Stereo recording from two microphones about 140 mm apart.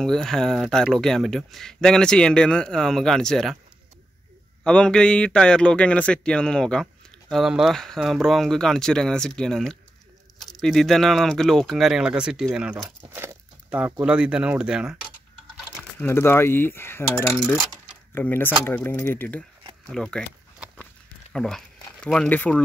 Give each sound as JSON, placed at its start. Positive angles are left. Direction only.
{"t": 0.0, "sound": "a man's voice", "side_deg": 5}
{"t": 4.6, "sound": "a man's voice", "side_deg": 5}
{"t": 16.0, "sound": "coin", "side_deg": 15}
{"t": 19.9, "sound": "a man's voice", "side_deg": 5}
{"t": 20.7, "sound": "a sound", "side_deg": 5}